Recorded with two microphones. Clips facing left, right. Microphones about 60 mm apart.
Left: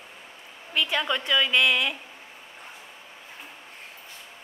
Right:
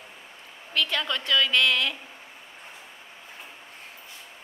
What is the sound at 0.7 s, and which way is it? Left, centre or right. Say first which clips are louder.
A woman's voice: left 2 dB; centre.